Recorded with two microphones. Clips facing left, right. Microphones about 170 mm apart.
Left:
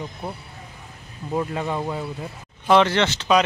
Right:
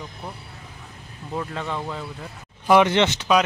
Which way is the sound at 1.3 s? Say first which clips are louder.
Left 4 dB; 15° left (ahead or behind).